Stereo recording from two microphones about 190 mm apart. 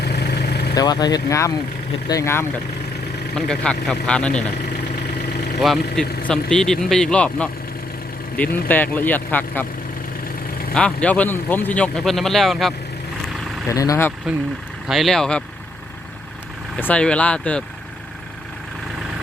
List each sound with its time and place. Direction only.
0.0 s vehicle: 60° left (ahead or behind)
0.8 s a man's voice: 20° left (ahead or behind); by 4.4 s 5° left (ahead or behind)
5.5 s a man's voice: centre (ahead or behind)
10.8 s a man's voice: 5° left (ahead or behind)
13.7 s a man's voice: 15° left (ahead or behind)
14.8 s speech: centre (ahead or behind)
16.7 s a man's voice: 5° left (ahead or behind)